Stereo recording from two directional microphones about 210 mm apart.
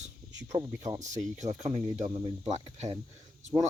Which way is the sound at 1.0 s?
35° right (ahead or behind).